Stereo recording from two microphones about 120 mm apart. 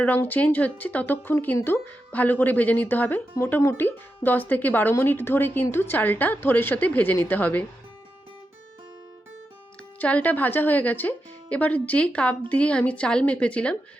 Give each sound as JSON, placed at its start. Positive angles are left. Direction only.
{"t": 0.0, "sound": "speech", "side_deg": 15}
{"t": 10.0, "sound": "speech", "side_deg": 10}